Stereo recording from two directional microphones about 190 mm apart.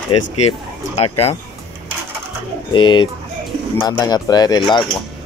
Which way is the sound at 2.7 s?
25° left (ahead or behind).